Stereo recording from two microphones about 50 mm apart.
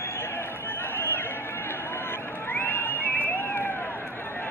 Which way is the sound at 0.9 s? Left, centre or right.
Left.